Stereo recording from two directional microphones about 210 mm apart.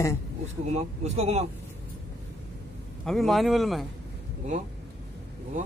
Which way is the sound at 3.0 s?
Centre (ahead or behind).